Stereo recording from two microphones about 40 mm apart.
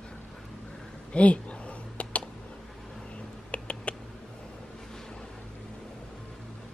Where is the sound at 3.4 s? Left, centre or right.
Left.